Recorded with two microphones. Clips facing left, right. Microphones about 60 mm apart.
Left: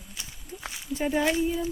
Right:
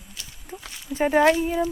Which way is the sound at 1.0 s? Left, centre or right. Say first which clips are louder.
Right 6 dB; right.